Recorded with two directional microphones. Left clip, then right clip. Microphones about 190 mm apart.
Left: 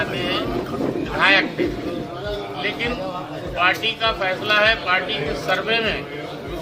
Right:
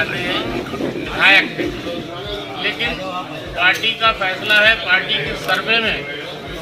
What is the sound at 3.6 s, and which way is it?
Speech, 25° left (ahead or behind).